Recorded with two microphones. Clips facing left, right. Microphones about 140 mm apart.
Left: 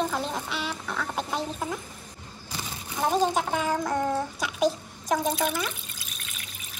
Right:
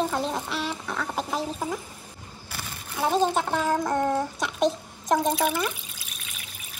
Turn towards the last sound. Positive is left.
turn(degrees=-5)  # may be behind; listen again after turning